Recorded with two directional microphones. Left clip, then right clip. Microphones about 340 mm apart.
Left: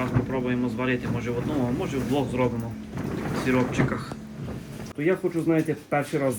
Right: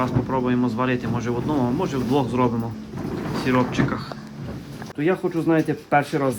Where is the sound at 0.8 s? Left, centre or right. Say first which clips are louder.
Right 4 dB; centre.